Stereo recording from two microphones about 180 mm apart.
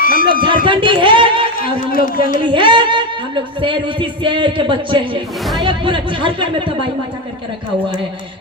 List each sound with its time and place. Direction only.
0.0 s a sound: 50° left (ahead or behind)
0.4 s speech: 25° right (ahead or behind)
1.5 s a man's voice: 55° left (ahead or behind)
2.4 s speech: 25° right (ahead or behind)